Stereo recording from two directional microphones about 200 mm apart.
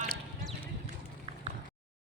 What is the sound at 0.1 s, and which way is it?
Clip-clop, 5° left (ahead or behind).